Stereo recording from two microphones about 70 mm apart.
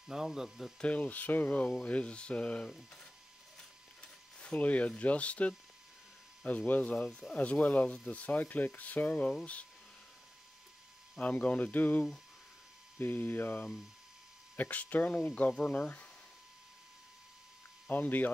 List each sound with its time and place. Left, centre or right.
0.1 s speech: centre
0.7 s speech: centre
4.0 s speech: centre
11.1 s speech: centre
13.0 s speech: left
17.8 s speech: left